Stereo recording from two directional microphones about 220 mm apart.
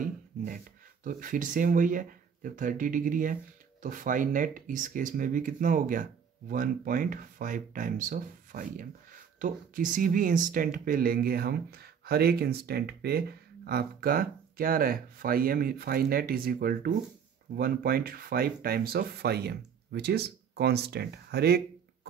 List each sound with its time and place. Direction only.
1.0 s speech: 35° right (ahead or behind)